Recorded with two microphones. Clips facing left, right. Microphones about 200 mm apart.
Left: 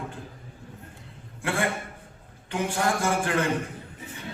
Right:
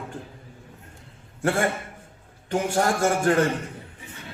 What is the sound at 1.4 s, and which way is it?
A man's voice, 45° right (ahead or behind).